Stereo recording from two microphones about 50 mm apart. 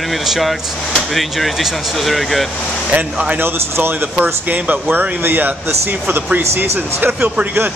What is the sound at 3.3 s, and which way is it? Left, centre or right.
Speech, right.